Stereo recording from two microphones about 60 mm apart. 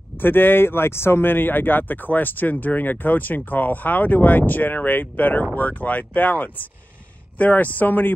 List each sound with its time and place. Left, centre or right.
0.2 s speech: left